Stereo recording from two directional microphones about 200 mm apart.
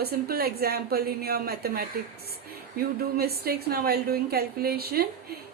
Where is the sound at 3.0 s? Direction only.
50° right (ahead or behind).